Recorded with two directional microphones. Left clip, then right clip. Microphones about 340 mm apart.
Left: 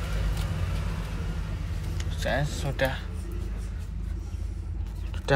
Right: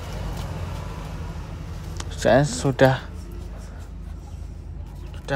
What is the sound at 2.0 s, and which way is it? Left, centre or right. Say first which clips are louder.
Speech: right 11 dB; right.